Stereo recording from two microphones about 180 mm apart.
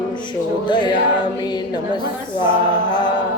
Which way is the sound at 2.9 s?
25° left (ahead or behind).